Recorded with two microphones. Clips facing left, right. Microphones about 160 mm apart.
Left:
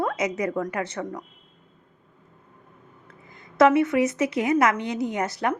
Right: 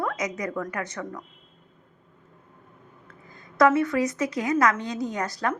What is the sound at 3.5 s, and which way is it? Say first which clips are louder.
Speech: left 2 dB; 25° left (ahead or behind).